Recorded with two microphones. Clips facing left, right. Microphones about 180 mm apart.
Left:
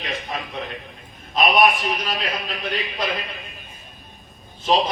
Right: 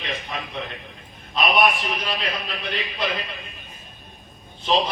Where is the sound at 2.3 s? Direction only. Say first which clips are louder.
Left 2 dB; 45° left (ahead or behind).